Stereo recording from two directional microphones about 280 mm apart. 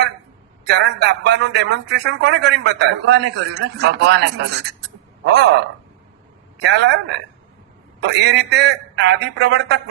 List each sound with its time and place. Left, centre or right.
0.7 s a man's voice: right
6.6 s a man's voice: right
8.0 s a man's voice: right